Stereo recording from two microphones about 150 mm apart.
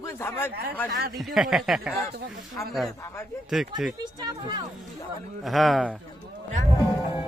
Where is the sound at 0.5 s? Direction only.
90° right.